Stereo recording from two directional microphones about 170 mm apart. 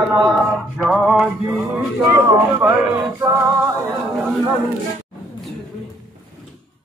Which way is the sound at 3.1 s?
15° right (ahead or behind).